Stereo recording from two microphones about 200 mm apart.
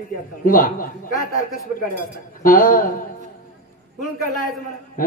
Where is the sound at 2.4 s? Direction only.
45° left (ahead or behind).